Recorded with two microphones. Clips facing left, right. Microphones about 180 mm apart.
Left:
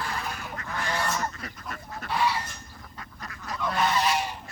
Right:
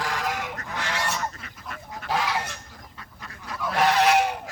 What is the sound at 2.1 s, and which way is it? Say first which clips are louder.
Goose: right 1 dB; 85° right.